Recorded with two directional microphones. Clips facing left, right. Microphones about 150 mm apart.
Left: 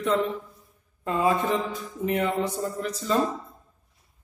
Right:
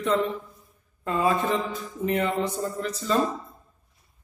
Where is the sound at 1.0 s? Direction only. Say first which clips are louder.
Even; 20° left (ahead or behind).